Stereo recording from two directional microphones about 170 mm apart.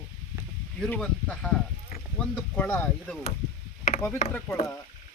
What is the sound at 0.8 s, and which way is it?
Speech, 5° left (ahead or behind).